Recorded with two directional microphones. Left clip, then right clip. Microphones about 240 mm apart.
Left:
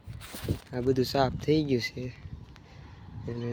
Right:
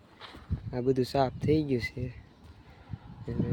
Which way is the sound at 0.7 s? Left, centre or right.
Centre.